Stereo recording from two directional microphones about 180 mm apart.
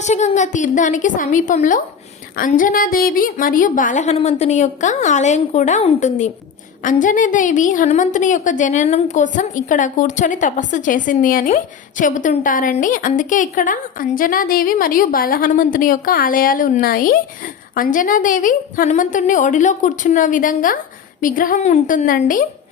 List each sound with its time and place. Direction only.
0.0 s a woman's voice: 40° left (ahead or behind)